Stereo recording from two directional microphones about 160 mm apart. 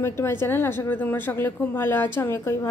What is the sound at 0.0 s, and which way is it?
A woman's voice, 15° left (ahead or behind).